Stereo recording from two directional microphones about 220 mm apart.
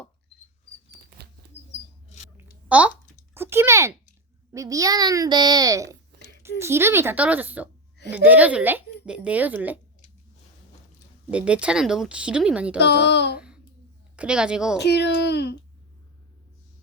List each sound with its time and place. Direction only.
2.1 s a sound: 30° left (ahead or behind)
2.6 s a child's voice: 5° right (ahead or behind)
11.3 s speech: 5° right (ahead or behind)
12.8 s a child's voice: 50° left (ahead or behind)
14.2 s speech: 5° right (ahead or behind)
14.8 s a child's voice: 50° left (ahead or behind)